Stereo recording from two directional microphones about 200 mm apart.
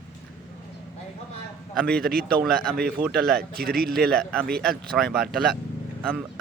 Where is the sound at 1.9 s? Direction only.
50° right (ahead or behind).